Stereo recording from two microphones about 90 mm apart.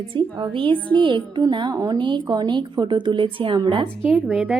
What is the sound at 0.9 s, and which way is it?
Speech, 70° right (ahead or behind).